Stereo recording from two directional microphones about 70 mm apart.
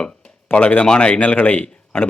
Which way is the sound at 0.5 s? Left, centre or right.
Left.